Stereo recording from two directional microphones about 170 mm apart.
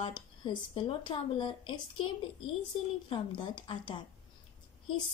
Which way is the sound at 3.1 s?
30° left (ahead or behind).